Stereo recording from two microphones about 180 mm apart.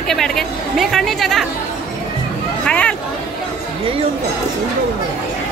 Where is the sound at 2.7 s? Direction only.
5° left (ahead or behind).